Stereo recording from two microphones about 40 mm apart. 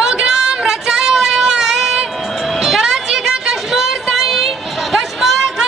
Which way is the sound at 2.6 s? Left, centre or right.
Centre.